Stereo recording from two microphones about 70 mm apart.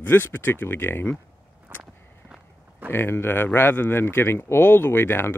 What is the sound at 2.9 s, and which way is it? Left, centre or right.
Speech, left.